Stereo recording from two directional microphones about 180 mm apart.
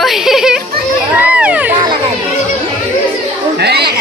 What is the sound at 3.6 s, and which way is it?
Chatter, 65° right (ahead or behind).